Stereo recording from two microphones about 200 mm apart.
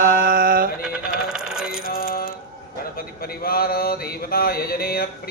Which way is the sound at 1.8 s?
45° left (ahead or behind).